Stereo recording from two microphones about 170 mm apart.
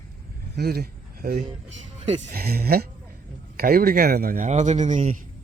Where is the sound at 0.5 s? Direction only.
65° right (ahead or behind).